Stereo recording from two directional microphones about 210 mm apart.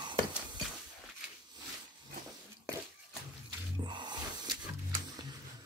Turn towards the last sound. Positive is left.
turn(degrees=-20)  # may be behind; listen again after turning